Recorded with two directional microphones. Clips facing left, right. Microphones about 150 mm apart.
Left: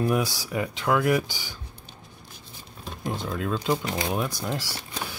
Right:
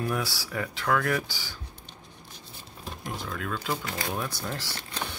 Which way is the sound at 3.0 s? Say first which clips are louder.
Left 6 dB; 25° left (ahead or behind).